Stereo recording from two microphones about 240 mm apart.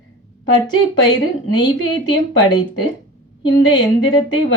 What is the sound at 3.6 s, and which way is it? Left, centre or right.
Speech, centre.